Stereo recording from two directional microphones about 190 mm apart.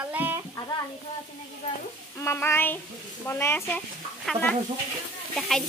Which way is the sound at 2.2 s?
15° left (ahead or behind).